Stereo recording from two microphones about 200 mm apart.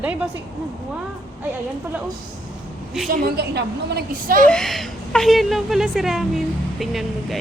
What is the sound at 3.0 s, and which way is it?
A woman's voice, 50° right (ahead or behind).